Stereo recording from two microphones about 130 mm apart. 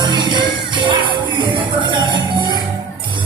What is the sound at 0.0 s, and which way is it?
Music, 35° right (ahead or behind).